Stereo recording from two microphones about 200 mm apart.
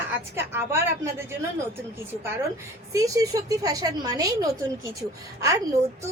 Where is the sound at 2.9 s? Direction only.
15° right (ahead or behind).